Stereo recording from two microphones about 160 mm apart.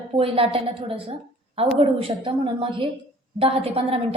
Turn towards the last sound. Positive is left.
turn(degrees=-40)  # may be behind; listen again after turning